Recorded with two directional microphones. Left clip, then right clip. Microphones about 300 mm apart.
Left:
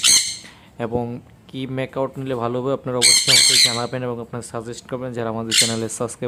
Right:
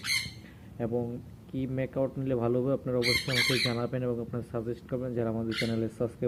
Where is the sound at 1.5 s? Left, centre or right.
Left.